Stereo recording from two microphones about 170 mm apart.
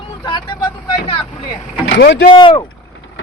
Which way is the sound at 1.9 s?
85° left.